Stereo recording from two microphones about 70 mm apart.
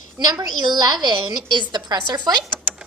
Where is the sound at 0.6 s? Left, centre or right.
Right.